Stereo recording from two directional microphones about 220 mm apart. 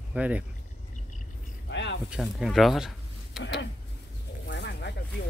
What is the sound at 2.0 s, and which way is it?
Speech, centre (ahead or behind).